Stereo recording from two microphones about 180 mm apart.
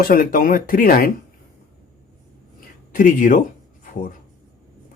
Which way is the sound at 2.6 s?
50° left (ahead or behind).